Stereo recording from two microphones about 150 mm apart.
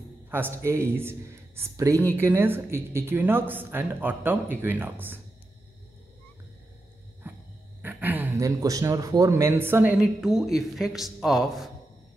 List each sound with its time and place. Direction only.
0.3 s speech: 15° right (ahead or behind)
7.2 s dog: 15° right (ahead or behind)
7.8 s speech: 10° right (ahead or behind)